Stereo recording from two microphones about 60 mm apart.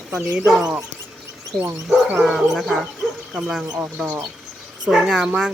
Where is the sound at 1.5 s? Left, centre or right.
Centre.